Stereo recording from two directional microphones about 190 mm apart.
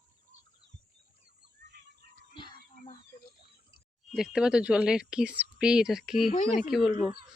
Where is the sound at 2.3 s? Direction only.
25° left (ahead or behind).